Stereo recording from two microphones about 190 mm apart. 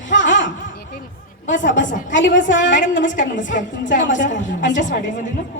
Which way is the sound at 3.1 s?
40° left (ahead or behind).